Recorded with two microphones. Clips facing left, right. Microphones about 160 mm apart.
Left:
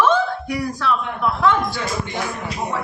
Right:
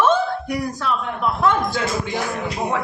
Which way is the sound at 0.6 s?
20° right (ahead or behind).